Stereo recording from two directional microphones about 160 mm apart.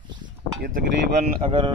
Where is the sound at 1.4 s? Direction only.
35° right (ahead or behind).